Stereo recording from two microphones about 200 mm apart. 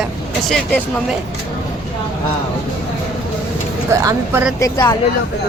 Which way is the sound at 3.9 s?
15° right (ahead or behind).